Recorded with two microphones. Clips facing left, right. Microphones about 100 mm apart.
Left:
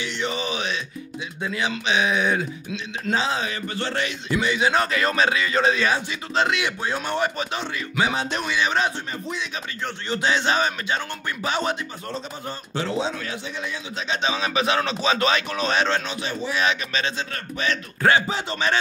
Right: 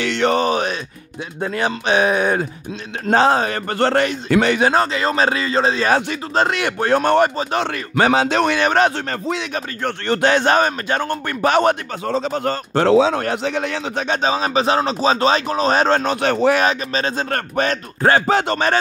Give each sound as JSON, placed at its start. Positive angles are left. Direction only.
{"t": 0.0, "sound": "a man's voice", "side_deg": -70}
{"t": 4.3, "sound": "speech", "side_deg": -65}
{"t": 4.7, "sound": "a man's voice", "side_deg": -30}
{"t": 6.3, "sound": "speech", "side_deg": -45}
{"t": 8.0, "sound": "speech", "side_deg": -90}
{"t": 9.5, "sound": "speech", "side_deg": -55}
{"t": 12.2, "sound": "a man's voice", "side_deg": -75}
{"t": 16.2, "sound": "speech", "side_deg": -65}
{"t": 16.6, "sound": "a man's voice", "side_deg": -45}
{"t": 18.2, "sound": "speech", "side_deg": -65}